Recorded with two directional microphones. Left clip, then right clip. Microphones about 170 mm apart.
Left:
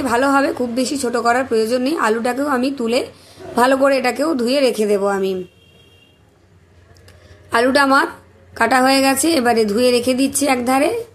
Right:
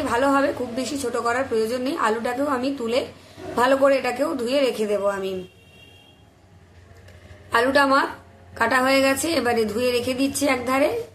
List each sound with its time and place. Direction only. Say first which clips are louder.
0.0 s a woman's voice: left 4 dB; 40° left (ahead or behind)
7.4 s a woman's voice: left 4 dB; 40° left (ahead or behind)